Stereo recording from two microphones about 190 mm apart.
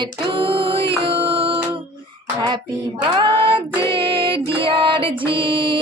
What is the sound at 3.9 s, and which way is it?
Music, 25° right (ahead or behind).